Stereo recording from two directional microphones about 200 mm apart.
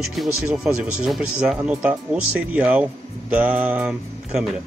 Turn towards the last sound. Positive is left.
turn(degrees=-5)  # may be behind; listen again after turning